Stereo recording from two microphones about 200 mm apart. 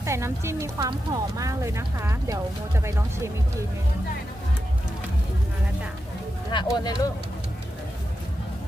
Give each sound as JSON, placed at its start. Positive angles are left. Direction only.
{"t": 0.0, "sound": "speech", "side_deg": -15}
{"t": 6.5, "sound": "speech", "side_deg": 20}